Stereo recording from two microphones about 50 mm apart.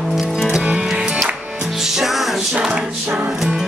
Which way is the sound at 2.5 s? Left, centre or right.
Centre.